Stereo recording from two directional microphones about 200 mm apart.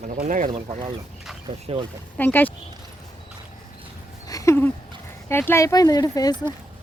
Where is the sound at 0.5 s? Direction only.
25° right (ahead or behind).